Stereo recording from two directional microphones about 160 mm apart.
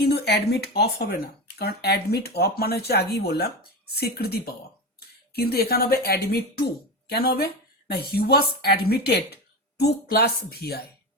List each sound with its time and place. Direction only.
0.0 s a woman's voice: 90° left